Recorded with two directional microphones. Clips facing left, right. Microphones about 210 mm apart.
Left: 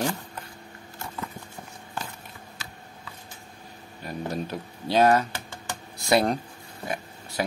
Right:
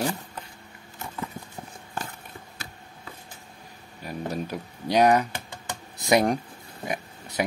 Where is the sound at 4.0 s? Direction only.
10° right (ahead or behind).